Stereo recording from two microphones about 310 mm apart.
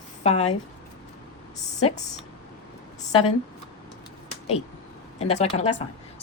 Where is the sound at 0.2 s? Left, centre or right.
Left.